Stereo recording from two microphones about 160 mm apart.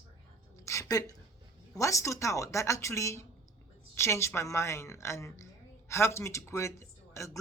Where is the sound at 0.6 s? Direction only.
20° left (ahead or behind).